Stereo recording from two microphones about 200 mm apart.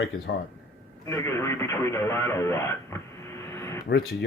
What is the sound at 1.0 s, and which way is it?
Speech, 15° left (ahead or behind).